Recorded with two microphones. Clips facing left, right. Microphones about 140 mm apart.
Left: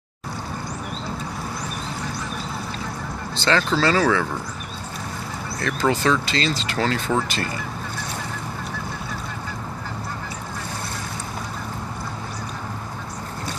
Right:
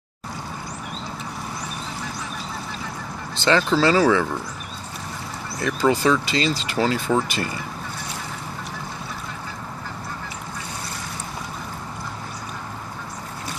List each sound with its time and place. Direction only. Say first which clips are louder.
3.3 s speech: right 2 dB; 15° right (ahead or behind)
5.6 s speech: right 2 dB; 10° right (ahead or behind)